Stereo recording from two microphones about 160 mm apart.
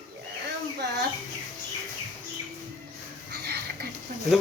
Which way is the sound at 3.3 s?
90° right.